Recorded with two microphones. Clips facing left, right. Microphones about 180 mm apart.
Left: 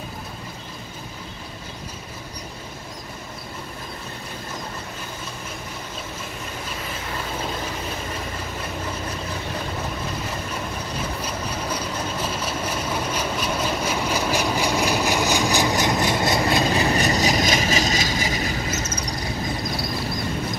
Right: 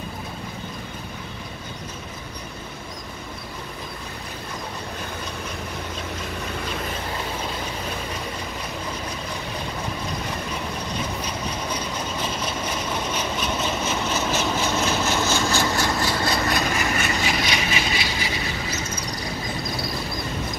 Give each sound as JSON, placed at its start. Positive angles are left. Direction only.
{"t": 11.0, "sound": "vehicle", "side_deg": 5}
{"t": 16.7, "sound": "vehicle", "side_deg": 35}